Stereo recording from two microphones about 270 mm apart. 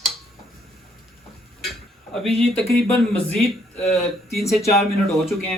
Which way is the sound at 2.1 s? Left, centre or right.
Centre.